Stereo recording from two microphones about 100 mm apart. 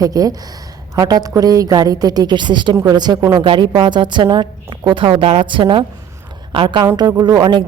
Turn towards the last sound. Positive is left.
turn(degrees=-45)  # may be behind; listen again after turning